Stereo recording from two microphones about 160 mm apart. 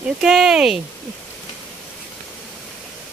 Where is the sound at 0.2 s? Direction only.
Centre (ahead or behind).